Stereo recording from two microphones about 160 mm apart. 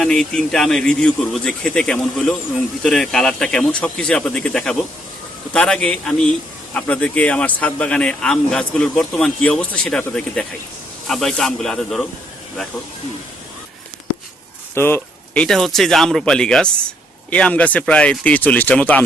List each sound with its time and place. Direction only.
0.0 s speech: 5° left (ahead or behind)
14.8 s speech: 15° left (ahead or behind)
15.4 s speech: centre (ahead or behind)